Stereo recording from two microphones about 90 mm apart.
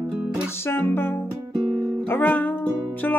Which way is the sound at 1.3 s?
15° right (ahead or behind).